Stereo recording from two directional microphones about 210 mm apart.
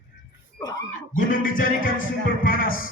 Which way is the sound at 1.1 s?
40° left (ahead or behind).